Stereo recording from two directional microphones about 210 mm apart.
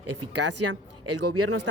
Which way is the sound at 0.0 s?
90° right.